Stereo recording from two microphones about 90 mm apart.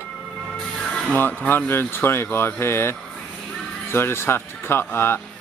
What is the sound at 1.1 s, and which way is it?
Speech, 20° left (ahead or behind).